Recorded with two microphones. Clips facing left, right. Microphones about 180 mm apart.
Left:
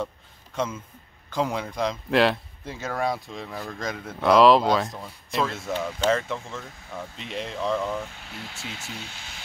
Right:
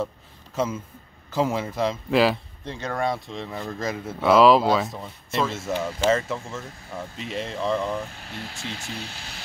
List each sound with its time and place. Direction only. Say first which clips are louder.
0.6 s speech: right 3 dB; 5° right (ahead or behind)
8.3 s speech: right 3 dB; 35° right (ahead or behind)